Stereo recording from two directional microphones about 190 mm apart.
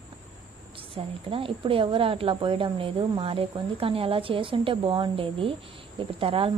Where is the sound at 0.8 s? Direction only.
30° right (ahead or behind).